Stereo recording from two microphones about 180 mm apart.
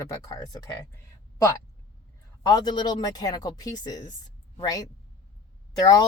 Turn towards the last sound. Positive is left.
turn(degrees=20)  # may be behind; listen again after turning